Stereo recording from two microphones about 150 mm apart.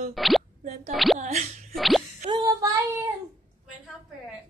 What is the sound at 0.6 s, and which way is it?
Speech, 45° right (ahead or behind).